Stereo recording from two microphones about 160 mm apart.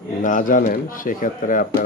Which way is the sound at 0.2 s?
55° left (ahead or behind).